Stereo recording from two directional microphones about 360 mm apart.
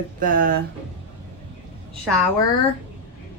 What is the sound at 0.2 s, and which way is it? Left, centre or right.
Speech, right.